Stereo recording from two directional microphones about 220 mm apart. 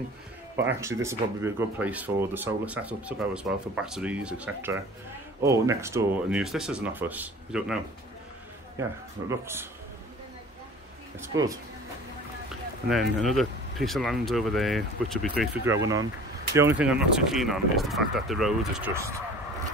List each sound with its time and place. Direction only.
0.6 s speech: 10° right (ahead or behind)
11.1 s speech: 15° right (ahead or behind)
13.2 s speech: centre (ahead or behind)
18.9 s speech: 15° right (ahead or behind)